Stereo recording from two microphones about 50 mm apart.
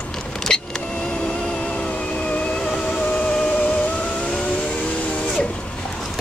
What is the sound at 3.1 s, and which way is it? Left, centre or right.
Music, left.